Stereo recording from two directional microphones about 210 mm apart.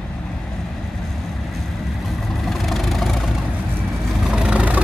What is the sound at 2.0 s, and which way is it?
Vehicle, centre (ahead or behind).